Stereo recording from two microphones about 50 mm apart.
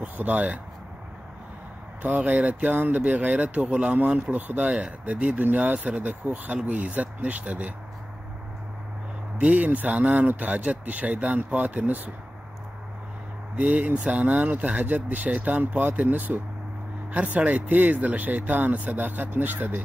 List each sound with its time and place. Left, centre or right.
0.0 s speech: right
2.0 s speech: right
9.4 s speech: right
13.6 s speech: right
15.8 s speech: right